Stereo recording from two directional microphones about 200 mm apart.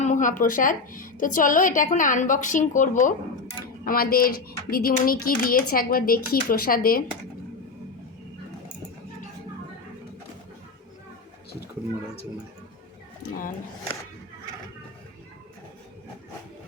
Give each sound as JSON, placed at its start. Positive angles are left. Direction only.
{"t": 0.0, "sound": "a woman's voice", "side_deg": 40}